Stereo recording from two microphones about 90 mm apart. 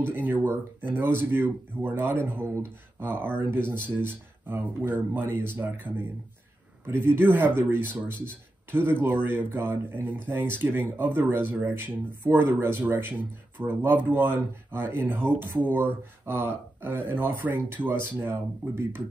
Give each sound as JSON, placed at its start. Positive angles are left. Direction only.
{"t": 0.0, "sound": "speech", "side_deg": -20}